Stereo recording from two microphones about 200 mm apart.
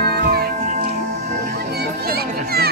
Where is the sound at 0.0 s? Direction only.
50° right (ahead or behind).